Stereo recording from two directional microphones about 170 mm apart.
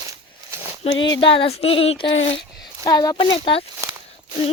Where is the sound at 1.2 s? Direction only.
30° left (ahead or behind).